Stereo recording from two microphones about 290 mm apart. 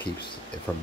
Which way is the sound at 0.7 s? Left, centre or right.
Centre.